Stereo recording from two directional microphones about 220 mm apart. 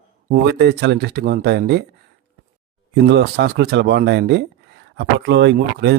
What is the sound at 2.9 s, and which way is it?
Speech, 50° right (ahead or behind).